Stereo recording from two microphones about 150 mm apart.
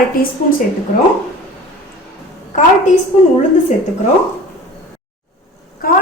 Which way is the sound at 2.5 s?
50° left (ahead or behind).